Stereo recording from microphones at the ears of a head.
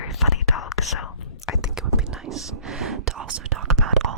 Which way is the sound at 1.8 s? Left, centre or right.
Right.